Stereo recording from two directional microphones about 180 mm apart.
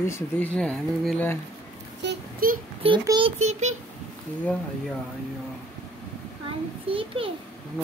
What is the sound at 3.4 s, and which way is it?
Speech, 40° right (ahead or behind).